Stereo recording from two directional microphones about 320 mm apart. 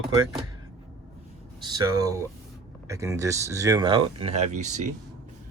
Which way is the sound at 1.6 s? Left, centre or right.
Centre.